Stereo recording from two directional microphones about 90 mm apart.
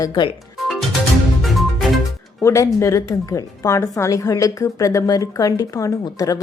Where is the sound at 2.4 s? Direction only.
35° left (ahead or behind).